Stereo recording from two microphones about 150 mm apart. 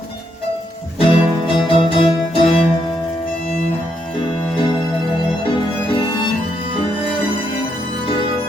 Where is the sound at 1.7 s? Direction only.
35° left (ahead or behind).